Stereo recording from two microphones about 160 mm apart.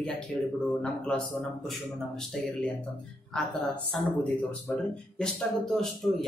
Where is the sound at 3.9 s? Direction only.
5° left (ahead or behind).